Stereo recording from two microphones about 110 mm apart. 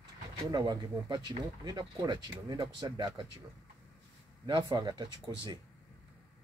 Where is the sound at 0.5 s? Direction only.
35° right (ahead or behind).